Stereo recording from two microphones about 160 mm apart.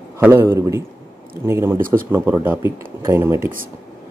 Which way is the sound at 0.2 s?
15° right (ahead or behind).